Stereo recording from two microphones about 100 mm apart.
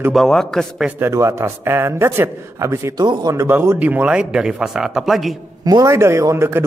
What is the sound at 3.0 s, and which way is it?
Speech, 50° right (ahead or behind).